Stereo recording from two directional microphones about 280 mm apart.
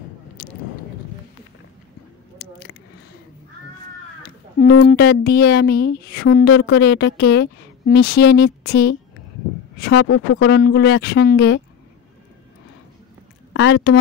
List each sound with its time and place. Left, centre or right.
0.4 s a sound: left
4.8 s a woman's voice: left
6.5 s a woman's voice: left
10.0 s speech: left
10.6 s a woman's voice: left
13.5 s speech: left